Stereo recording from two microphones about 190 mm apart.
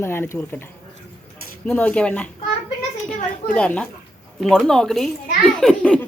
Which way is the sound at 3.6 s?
5° left (ahead or behind).